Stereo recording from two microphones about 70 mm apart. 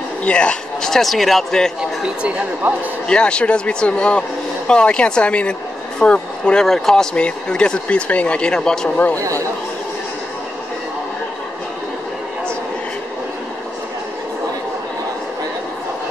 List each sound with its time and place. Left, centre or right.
0.2 s a woman's voice: centre
2.0 s a man's voice: centre
3.1 s a woman's voice: centre
8.9 s speech: left
9.2 s speech: right